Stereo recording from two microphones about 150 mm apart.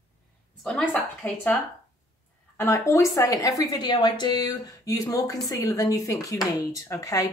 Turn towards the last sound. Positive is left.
turn(degrees=20)  # may be behind; listen again after turning